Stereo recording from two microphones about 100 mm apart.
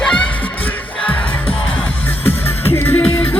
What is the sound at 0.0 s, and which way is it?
Music, 10° left (ahead or behind).